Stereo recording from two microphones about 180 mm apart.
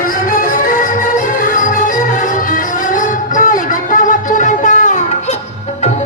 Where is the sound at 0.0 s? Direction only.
50° left (ahead or behind).